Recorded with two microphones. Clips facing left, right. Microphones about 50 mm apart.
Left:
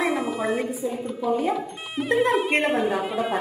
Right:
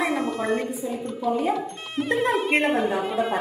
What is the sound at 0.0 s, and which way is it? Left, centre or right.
Speech, centre.